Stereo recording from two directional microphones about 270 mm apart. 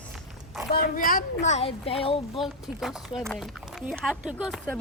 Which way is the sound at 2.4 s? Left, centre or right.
Centre.